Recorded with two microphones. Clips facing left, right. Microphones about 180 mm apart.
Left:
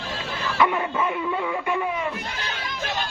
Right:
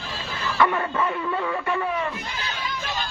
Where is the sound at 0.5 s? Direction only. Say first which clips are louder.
Even; 10° left (ahead or behind).